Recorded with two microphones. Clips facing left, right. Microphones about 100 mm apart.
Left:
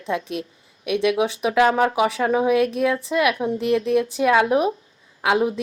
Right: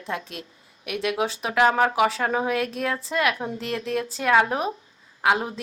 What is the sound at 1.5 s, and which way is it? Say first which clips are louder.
Speech: left 1 dB; 30° right (ahead or behind).